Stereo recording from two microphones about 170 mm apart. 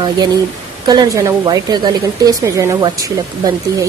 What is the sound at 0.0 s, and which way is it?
Speech, 25° right (ahead or behind).